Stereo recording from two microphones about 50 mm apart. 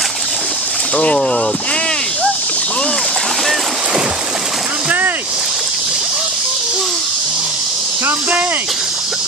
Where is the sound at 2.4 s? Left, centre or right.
Left.